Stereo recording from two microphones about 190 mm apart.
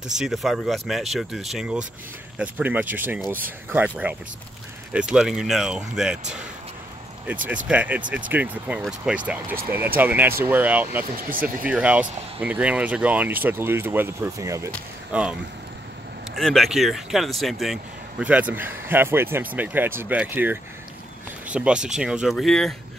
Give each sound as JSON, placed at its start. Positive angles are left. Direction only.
{"t": 0.2, "sound": "speech", "side_deg": 0}
{"t": 4.9, "sound": "speech", "side_deg": -5}
{"t": 7.4, "sound": "speech", "side_deg": -5}
{"t": 11.1, "sound": "speech", "side_deg": -45}
{"t": 11.4, "sound": "speech", "side_deg": -10}
{"t": 16.3, "sound": "speech", "side_deg": 0}